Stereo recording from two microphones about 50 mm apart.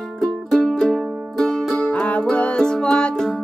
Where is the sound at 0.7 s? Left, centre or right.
Centre.